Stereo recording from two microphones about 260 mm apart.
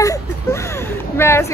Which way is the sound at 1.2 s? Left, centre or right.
Centre.